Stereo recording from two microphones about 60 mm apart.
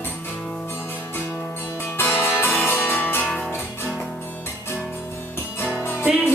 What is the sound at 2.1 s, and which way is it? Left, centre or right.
Music, left.